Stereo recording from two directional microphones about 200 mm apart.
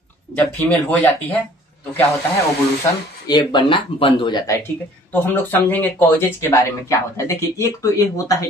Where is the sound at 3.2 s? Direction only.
20° left (ahead or behind).